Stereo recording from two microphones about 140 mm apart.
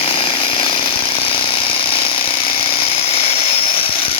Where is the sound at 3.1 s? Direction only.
45° left (ahead or behind).